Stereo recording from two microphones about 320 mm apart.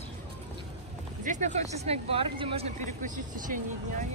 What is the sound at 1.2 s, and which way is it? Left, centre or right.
Speech, right.